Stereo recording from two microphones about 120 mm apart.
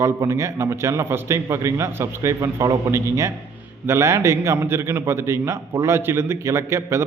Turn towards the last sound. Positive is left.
turn(degrees=-20)  # may be behind; listen again after turning